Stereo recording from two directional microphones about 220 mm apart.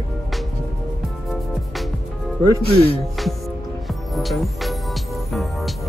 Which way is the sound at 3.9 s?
Centre (ahead or behind).